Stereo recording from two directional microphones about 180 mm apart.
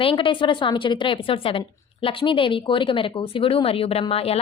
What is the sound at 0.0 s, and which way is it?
A woman's voice, 30° left (ahead or behind).